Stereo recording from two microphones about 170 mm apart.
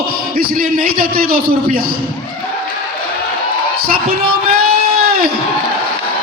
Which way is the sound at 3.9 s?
60° right (ahead or behind).